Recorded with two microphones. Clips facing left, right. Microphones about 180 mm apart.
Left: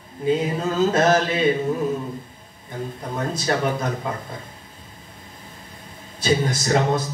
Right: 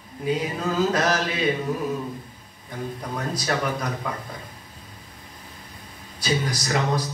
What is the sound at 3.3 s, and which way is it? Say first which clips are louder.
Speech: left 3 dB; 25° left (ahead or behind).